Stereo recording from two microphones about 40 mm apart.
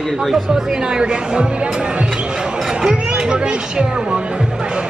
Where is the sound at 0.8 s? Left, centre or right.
Right.